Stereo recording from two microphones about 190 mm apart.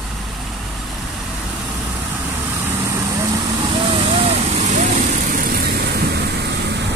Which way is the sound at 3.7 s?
25° right (ahead or behind).